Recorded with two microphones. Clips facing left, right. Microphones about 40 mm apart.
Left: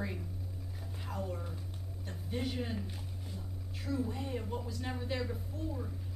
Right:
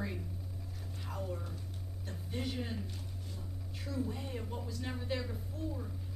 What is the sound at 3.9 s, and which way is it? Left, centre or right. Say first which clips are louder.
Speech: left 3 dB; centre.